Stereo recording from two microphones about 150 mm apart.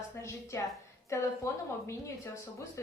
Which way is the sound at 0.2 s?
20° left (ahead or behind).